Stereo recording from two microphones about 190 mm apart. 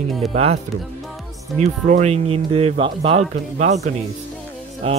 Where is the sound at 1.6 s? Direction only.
40° right (ahead or behind).